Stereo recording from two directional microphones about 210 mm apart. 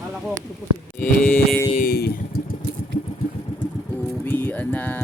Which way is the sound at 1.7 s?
45° left (ahead or behind).